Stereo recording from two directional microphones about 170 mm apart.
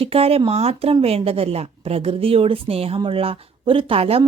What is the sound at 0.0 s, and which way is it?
Speech, 35° right (ahead or behind).